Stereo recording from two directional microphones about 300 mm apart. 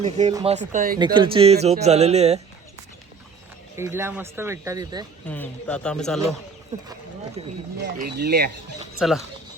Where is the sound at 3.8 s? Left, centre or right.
Centre.